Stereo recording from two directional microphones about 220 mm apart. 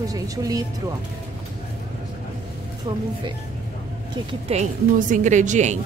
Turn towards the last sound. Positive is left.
turn(degrees=-35)  # may be behind; listen again after turning